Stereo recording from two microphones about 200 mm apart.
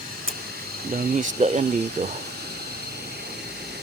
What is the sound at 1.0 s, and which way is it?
Speech, 40° right (ahead or behind).